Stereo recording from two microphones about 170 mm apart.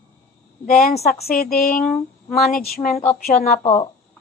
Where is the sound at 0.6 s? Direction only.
55° left (ahead or behind).